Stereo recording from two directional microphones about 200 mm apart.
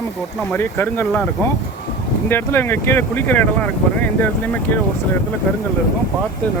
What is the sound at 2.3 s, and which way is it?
Speech, 10° left (ahead or behind).